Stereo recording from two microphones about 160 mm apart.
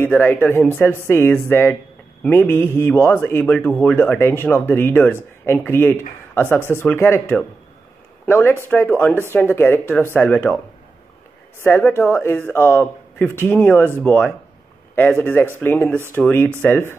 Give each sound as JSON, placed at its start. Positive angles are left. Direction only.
{"t": 0.0, "sound": "a man's voice", "side_deg": 10}
{"t": 11.6, "sound": "a man's voice", "side_deg": 10}